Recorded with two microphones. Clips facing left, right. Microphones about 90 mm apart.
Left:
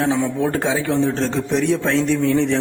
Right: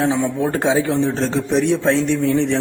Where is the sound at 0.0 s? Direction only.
5° right (ahead or behind).